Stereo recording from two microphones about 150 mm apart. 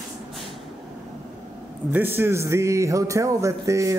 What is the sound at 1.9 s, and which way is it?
Speech, 15° right (ahead or behind).